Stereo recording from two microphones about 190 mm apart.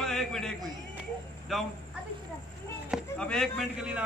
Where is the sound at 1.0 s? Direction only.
Centre (ahead or behind).